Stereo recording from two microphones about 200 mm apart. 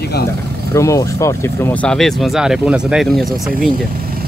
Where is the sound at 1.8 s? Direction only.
Centre (ahead or behind).